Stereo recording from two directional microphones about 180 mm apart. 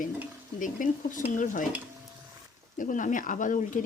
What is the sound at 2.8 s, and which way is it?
Stir, 45° left (ahead or behind).